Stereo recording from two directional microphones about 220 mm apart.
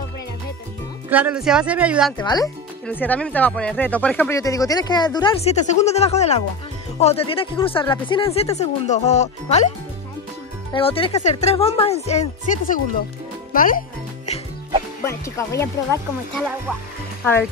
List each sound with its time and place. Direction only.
1.1 s speech: 5° right (ahead or behind)
2.2 s speech: 15° left (ahead or behind)
10.7 s speech: 25° left (ahead or behind)
13.5 s music: 40° left (ahead or behind)
15.0 s speech: 15° left (ahead or behind)
16.3 s speech: 5° right (ahead or behind)
17.2 s speech: 10° left (ahead or behind)